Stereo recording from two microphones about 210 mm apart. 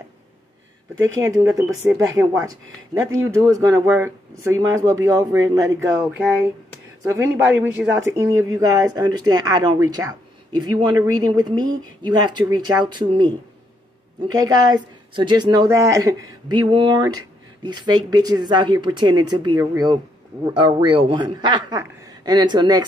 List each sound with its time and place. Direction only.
0.9 s speech: 65° right (ahead or behind)
1.2 s speech: 15° right (ahead or behind)